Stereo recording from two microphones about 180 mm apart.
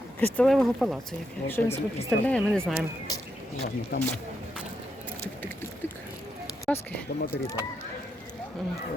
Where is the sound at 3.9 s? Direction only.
70° left (ahead or behind).